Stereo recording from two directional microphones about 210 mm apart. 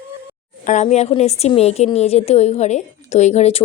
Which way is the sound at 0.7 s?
35° left (ahead or behind).